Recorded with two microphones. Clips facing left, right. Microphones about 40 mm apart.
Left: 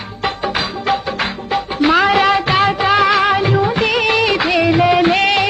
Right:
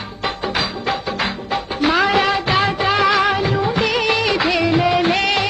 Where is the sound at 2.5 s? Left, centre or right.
Centre.